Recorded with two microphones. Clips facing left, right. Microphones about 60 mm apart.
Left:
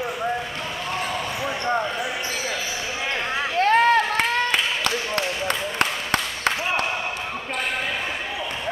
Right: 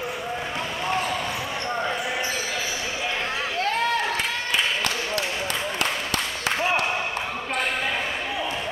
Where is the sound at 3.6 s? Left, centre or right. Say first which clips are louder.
Left 8 dB; left.